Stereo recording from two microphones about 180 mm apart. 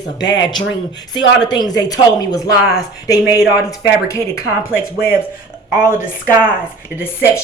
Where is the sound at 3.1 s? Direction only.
5° right (ahead or behind).